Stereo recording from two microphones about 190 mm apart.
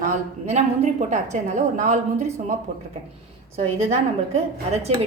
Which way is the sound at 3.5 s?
35° right (ahead or behind).